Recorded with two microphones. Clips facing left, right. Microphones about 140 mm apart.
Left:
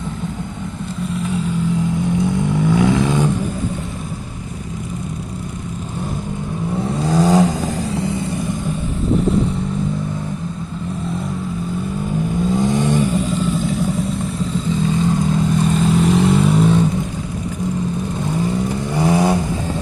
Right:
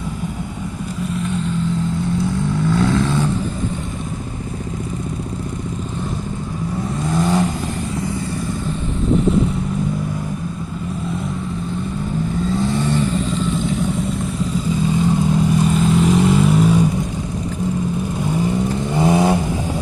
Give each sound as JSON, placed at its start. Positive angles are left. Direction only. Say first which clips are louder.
{"t": 1.1, "sound": "vehicle", "louder": "left 1 dB", "side_deg": 5}
{"t": 2.6, "sound": "vehicle", "louder": "left 2 dB", "side_deg": 15}
{"t": 7.1, "sound": "vehicle", "louder": "left 4 dB", "side_deg": 40}
{"t": 12.4, "sound": "vehicle", "louder": "left 3 dB", "side_deg": 15}
{"t": 15.0, "sound": "vehicle", "louder": "even", "side_deg": -15}
{"t": 15.3, "sound": "vehicle", "louder": "right 1 dB", "side_deg": -5}
{"t": 18.9, "sound": "vehicle", "louder": "even", "side_deg": -20}